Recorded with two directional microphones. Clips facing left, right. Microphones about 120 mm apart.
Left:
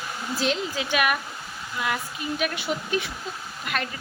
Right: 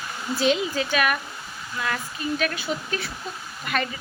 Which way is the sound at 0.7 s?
10° left (ahead or behind).